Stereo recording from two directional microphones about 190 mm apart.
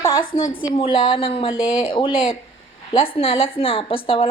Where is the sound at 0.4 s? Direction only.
45° left (ahead or behind).